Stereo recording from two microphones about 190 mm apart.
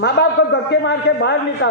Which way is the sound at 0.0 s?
65° left (ahead or behind).